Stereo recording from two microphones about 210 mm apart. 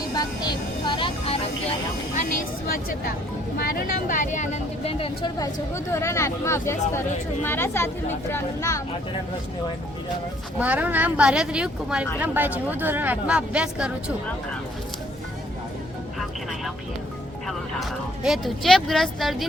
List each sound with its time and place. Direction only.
0.1 s vehicle: 20° left (ahead or behind)
2.1 s a sound: 40° left (ahead or behind)
3.6 s speech: 45° left (ahead or behind); by 8.8 s 15° left (ahead or behind)
10.6 s speech: 5° right (ahead or behind)
17.7 s speech: centre (ahead or behind)